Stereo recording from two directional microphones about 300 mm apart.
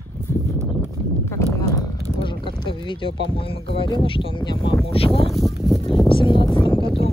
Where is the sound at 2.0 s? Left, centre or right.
Centre.